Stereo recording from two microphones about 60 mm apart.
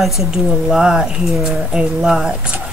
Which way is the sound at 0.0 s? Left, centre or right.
Centre.